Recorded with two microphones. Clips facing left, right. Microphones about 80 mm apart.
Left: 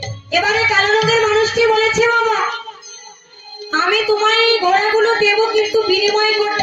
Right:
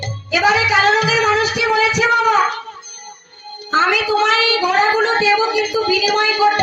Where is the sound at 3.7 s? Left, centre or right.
Centre.